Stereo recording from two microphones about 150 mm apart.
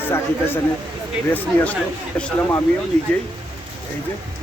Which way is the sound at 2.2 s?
5° left (ahead or behind).